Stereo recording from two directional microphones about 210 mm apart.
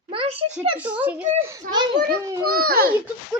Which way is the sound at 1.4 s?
15° right (ahead or behind).